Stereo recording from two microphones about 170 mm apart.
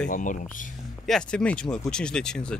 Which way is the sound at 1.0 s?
5° left (ahead or behind).